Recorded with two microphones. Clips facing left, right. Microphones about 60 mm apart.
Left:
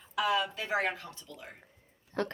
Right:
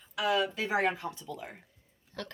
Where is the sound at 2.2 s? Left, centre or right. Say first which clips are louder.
Left 8 dB; left.